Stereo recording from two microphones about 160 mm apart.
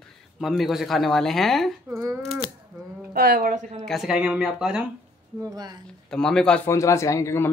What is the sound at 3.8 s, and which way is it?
A man's voice, centre (ahead or behind).